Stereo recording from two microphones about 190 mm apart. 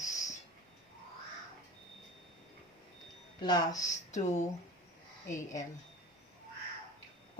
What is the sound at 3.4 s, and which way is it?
Speech, 20° left (ahead or behind).